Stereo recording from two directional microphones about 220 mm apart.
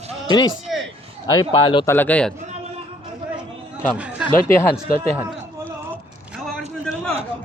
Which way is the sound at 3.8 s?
5° right (ahead or behind).